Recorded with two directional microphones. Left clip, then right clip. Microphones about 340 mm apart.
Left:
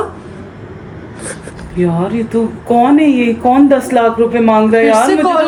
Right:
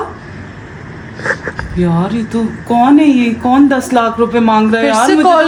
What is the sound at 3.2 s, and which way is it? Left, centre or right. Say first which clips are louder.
Speech: left 1 dB; centre.